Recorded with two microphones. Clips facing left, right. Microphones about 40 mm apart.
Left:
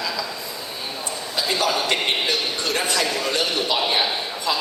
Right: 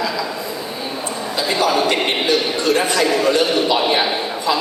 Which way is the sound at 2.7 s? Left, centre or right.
Right.